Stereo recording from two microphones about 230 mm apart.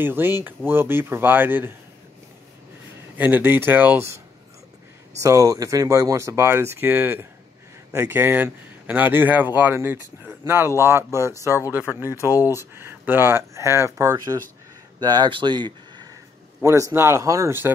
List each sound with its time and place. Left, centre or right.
0.0 s speech: centre
3.2 s speech: centre
5.2 s speech: centre